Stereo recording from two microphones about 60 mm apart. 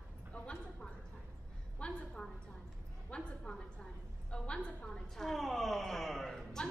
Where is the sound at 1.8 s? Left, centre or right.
Centre.